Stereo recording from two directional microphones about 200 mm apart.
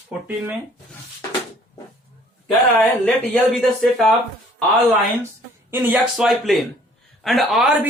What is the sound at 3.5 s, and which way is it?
Speech, centre (ahead or behind).